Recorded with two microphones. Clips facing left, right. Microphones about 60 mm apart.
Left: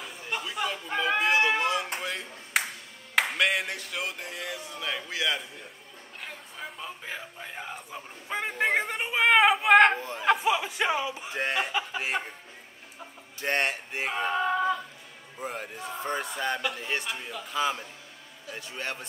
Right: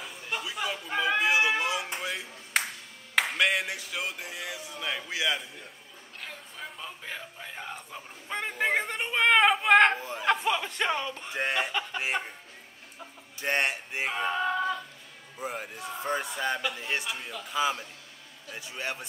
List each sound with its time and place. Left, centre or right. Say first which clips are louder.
0.0 s a sound: left 1 dB; centre
2.0 s clapping: even; centre
3.2 s speech: even; centre
6.2 s a man's voice: left 1 dB; centre
13.4 s a man's voice: even; centre